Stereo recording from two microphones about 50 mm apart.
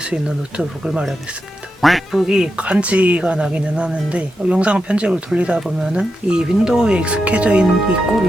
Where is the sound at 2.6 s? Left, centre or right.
Right.